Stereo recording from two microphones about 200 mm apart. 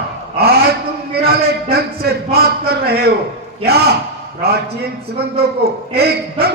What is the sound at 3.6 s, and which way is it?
Speech, 50° right (ahead or behind).